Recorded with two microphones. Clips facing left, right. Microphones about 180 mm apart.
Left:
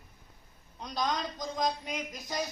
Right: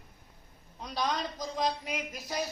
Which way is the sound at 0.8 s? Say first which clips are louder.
Even; 5° right (ahead or behind).